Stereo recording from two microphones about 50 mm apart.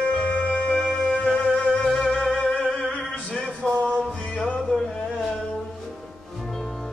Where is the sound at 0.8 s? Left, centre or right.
Centre.